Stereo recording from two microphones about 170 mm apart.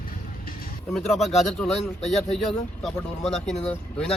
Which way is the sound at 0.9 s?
Centre (ahead or behind).